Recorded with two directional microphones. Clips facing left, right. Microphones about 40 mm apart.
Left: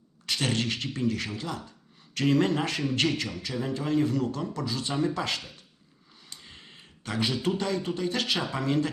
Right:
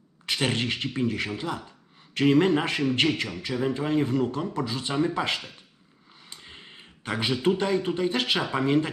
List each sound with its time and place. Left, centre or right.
0.3 s a man's voice: right